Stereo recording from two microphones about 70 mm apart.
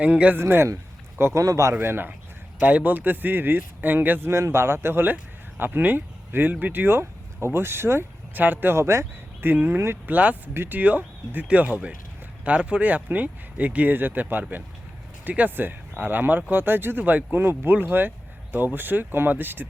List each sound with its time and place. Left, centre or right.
0.0 s speech: centre
0.3 s speech: right
1.2 s speech: right
1.8 s speech: right
2.6 s speech: right
4.3 s speech: right
9.5 s speech: right
10.5 s speech: right
10.8 s speech: right